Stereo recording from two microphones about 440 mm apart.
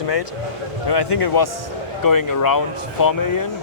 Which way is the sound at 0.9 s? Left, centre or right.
Left.